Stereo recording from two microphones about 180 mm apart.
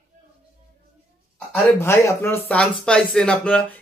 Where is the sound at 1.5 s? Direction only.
15° left (ahead or behind).